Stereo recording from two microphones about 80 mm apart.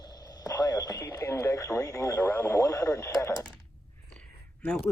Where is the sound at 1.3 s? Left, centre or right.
Left.